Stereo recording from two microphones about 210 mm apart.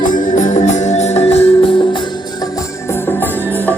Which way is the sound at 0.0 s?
40° left (ahead or behind).